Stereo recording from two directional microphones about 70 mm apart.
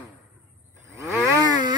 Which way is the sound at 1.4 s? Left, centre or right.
Right.